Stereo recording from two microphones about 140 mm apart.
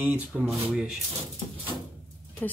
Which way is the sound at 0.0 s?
10° right (ahead or behind).